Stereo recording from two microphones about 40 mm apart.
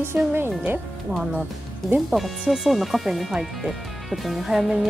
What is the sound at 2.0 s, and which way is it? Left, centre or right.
Speech, centre.